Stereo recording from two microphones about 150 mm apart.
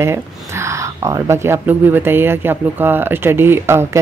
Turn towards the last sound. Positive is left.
turn(degrees=-15)  # may be behind; listen again after turning